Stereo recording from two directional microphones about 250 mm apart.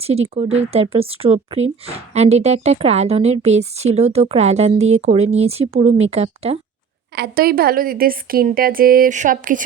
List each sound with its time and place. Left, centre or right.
0.0 s a woman's voice: right
7.2 s a woman's voice: right